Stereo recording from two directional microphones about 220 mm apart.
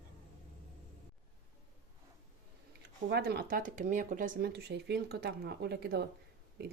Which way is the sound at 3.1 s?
45° right (ahead or behind).